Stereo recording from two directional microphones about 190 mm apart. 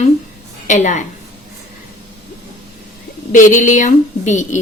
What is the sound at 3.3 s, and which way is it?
Speech, 40° left (ahead or behind).